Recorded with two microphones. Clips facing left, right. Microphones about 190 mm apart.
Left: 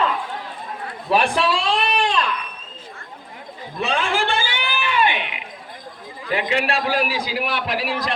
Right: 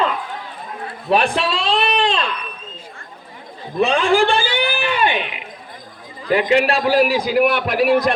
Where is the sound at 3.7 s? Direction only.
35° right (ahead or behind).